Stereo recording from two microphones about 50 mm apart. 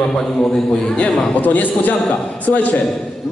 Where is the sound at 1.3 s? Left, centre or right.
Left.